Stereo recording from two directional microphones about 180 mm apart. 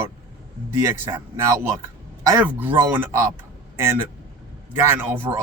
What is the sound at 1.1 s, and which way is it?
Speech, 15° right (ahead or behind).